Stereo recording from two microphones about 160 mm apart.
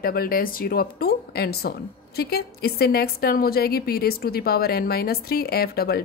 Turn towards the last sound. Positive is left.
turn(degrees=75)  # may be behind; listen again after turning